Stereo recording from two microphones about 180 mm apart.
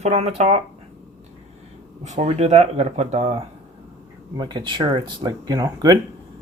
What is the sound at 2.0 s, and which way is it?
Speech, 40° right (ahead or behind).